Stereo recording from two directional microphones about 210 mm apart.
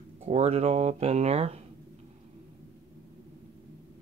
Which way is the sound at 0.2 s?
30° right (ahead or behind).